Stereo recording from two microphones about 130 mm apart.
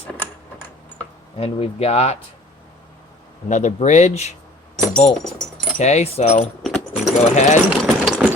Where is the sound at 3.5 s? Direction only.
65° left (ahead or behind).